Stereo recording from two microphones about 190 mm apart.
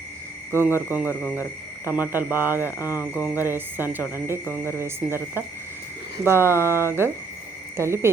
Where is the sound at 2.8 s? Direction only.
15° left (ahead or behind).